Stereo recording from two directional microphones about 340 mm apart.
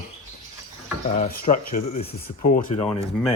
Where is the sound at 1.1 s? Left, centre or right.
Left.